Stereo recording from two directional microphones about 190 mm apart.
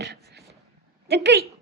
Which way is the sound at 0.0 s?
60° right (ahead or behind).